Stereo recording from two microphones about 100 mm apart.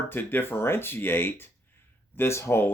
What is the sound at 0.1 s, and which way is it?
Speech, 20° left (ahead or behind).